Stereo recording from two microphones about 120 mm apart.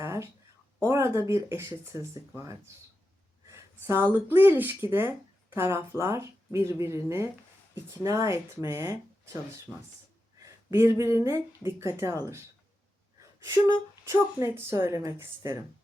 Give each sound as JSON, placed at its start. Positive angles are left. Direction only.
{"t": 0.0, "sound": "a sound", "side_deg": -20}
{"t": 0.9, "sound": "speech", "side_deg": -25}
{"t": 9.7, "sound": "speech", "side_deg": -5}
{"t": 10.4, "sound": "speech", "side_deg": -25}
{"t": 13.4, "sound": "speech", "side_deg": -25}